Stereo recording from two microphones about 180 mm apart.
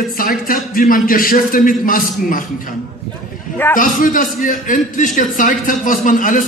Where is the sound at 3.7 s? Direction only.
50° left (ahead or behind).